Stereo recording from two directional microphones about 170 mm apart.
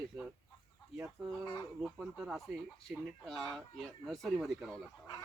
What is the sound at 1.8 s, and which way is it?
Speech, 5° right (ahead or behind).